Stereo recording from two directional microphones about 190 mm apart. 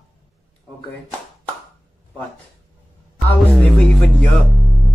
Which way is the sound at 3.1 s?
5° left (ahead or behind).